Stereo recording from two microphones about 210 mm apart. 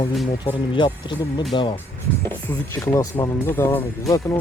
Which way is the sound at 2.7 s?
15° left (ahead or behind).